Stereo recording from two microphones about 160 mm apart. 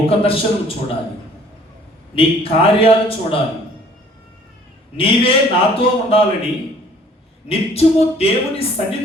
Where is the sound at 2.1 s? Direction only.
35° left (ahead or behind).